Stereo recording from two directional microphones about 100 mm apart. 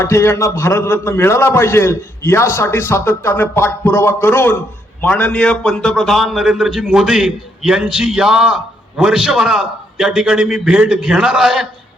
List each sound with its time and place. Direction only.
0.0 s a man's voice: 30° left (ahead or behind); by 11.7 s 5° right (ahead or behind)